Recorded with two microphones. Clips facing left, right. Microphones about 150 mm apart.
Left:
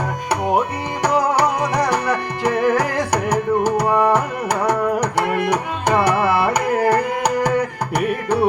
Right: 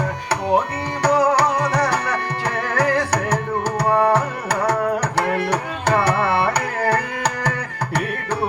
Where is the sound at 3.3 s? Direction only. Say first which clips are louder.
Left 5 dB; 15° left (ahead or behind).